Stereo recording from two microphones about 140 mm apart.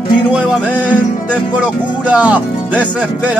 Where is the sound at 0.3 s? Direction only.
5° right (ahead or behind).